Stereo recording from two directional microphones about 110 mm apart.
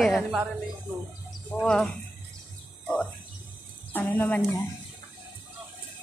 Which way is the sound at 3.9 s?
15° left (ahead or behind).